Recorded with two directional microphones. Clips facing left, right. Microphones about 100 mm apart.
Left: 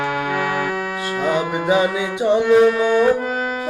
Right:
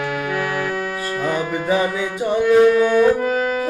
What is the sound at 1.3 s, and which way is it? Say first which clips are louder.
Music: left 2 dB; 15° left (ahead or behind).